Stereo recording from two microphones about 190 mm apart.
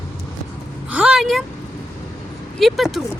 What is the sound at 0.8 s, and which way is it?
Speech, 5° right (ahead or behind).